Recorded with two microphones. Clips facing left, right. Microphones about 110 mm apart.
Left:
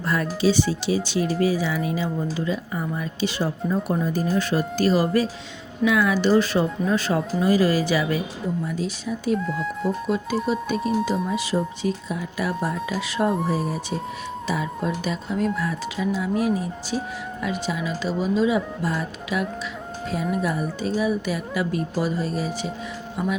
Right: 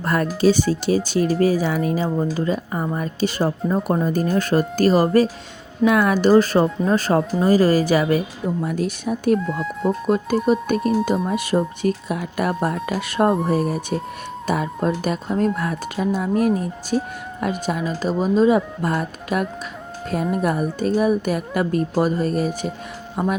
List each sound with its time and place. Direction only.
0.0 s speech: 50° right (ahead or behind)
8.6 s speech: 55° right (ahead or behind)
9.4 s speech: centre (ahead or behind)
10.1 s speech: 50° right (ahead or behind)